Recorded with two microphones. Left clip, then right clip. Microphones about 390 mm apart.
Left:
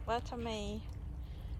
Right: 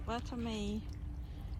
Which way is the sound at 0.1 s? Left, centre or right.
Centre.